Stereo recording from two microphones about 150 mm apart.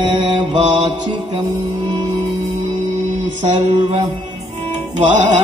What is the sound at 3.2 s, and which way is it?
Mantra, 55° right (ahead or behind).